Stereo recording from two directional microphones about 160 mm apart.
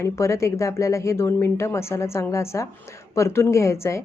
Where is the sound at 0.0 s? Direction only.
20° left (ahead or behind).